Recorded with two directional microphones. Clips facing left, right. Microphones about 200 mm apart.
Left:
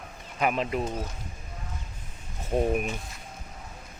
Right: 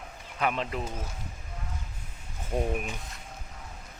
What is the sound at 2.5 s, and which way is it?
Speech, 35° left (ahead or behind).